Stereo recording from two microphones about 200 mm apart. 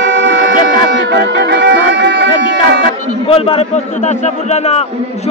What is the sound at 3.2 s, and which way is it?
A man's voice, 30° left (ahead or behind).